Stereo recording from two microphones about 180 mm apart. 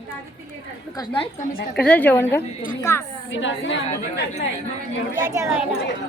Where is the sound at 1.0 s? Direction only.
30° left (ahead or behind).